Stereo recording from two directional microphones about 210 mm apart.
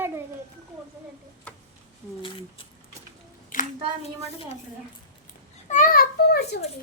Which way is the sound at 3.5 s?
40° left (ahead or behind).